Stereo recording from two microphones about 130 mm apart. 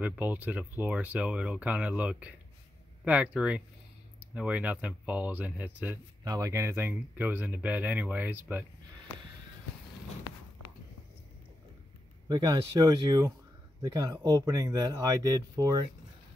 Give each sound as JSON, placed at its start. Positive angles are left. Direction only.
{"t": 0.0, "sound": "speech", "side_deg": -10}
{"t": 6.2, "sound": "speech", "side_deg": -25}
{"t": 12.3, "sound": "speech", "side_deg": -35}